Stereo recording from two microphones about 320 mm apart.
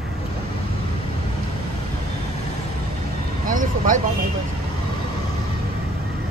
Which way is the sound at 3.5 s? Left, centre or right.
Right.